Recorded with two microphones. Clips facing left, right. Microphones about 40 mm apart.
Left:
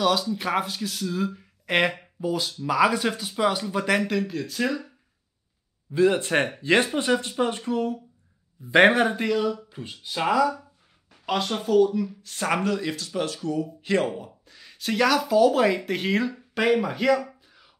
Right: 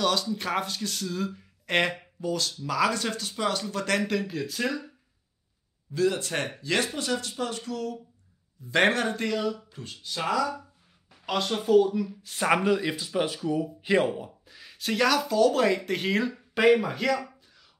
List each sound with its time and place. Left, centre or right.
0.0 s speech: centre
5.9 s speech: left
8.8 s speech: centre
9.7 s speech: centre
11.2 s speech: centre